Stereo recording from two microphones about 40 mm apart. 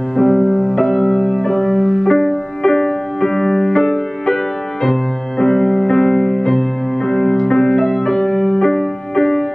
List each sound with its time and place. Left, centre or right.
0.2 s music: centre
5.4 s music: centre